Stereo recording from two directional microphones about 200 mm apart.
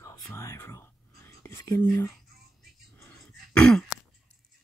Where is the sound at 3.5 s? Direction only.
5° left (ahead or behind).